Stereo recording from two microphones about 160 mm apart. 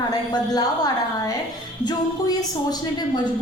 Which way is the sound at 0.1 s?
25° left (ahead or behind).